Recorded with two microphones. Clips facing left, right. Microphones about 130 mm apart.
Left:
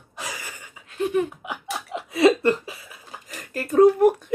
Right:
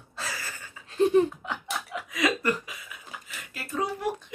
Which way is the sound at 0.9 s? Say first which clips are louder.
Right 3 dB; 30° right (ahead or behind).